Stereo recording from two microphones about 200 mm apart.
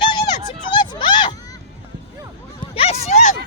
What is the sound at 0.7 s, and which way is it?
Speech, 25° left (ahead or behind).